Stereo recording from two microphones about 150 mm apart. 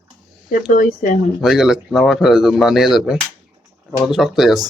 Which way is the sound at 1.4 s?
Centre (ahead or behind).